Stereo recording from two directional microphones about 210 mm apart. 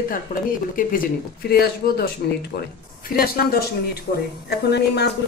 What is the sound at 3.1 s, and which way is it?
Speech, 45° left (ahead or behind).